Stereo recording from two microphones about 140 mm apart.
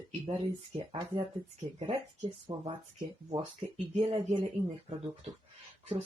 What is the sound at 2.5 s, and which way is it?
Speech, 30° right (ahead or behind).